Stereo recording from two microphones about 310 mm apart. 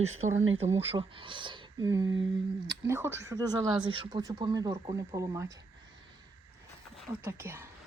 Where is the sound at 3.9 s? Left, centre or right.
Centre.